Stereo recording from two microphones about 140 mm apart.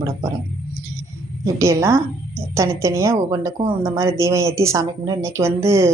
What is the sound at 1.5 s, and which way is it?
A woman's voice, 20° right (ahead or behind).